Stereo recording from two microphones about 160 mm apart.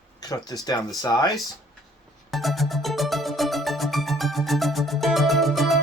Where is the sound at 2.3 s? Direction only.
Centre (ahead or behind).